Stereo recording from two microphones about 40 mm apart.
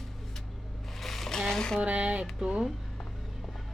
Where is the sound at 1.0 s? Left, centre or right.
Centre.